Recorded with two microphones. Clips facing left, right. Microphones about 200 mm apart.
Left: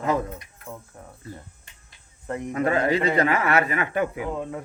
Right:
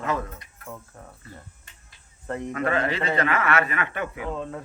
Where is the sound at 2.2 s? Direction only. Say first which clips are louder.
Left 2 dB; 15° left (ahead or behind).